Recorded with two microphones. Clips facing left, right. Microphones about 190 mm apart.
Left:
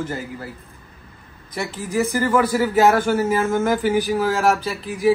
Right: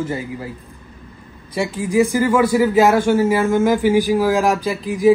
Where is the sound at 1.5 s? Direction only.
15° right (ahead or behind).